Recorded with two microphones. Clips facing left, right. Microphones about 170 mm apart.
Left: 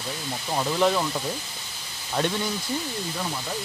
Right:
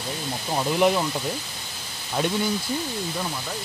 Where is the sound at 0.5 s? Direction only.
10° right (ahead or behind).